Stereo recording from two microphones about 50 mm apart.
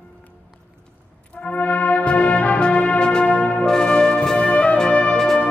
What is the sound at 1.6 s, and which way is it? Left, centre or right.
Music, left.